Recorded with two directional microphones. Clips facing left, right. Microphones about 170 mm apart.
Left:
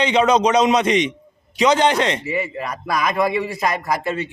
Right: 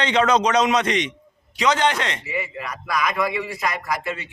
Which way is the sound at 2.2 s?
35° left (ahead or behind).